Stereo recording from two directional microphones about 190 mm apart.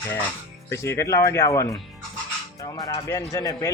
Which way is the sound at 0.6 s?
15° left (ahead or behind).